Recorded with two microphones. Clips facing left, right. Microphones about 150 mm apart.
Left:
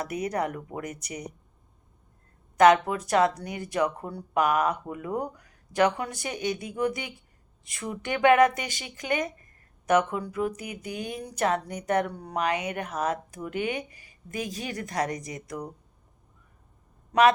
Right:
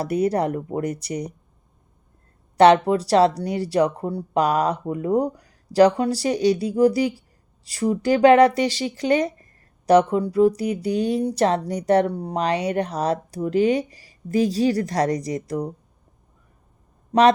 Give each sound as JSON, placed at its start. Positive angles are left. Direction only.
{"t": 0.0, "sound": "speech", "side_deg": -30}
{"t": 2.6, "sound": "speech", "side_deg": -35}
{"t": 17.1, "sound": "speech", "side_deg": -35}